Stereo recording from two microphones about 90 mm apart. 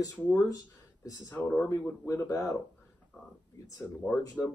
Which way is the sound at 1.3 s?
15° left (ahead or behind).